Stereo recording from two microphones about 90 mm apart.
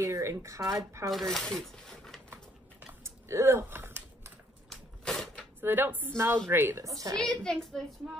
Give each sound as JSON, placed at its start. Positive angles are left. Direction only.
{"t": 0.0, "sound": "speech", "side_deg": -35}
{"t": 1.1, "sound": "speech", "side_deg": 5}
{"t": 2.9, "sound": "typing", "side_deg": -30}
{"t": 4.6, "sound": "a sound", "side_deg": 5}
{"t": 5.6, "sound": "a woman's voice", "side_deg": -25}
{"t": 7.2, "sound": "a woman's voice", "side_deg": 5}